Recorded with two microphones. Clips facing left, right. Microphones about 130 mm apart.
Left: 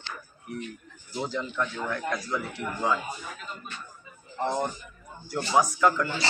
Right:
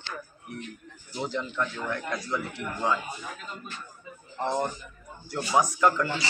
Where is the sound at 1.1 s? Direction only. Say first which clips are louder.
Even; 5° left (ahead or behind).